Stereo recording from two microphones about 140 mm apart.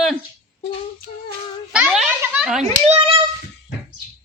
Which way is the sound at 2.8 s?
45° right (ahead or behind).